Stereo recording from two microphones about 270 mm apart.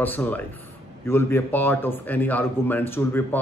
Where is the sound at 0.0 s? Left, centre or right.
Centre.